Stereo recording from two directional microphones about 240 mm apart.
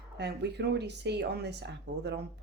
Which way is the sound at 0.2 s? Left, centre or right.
Right.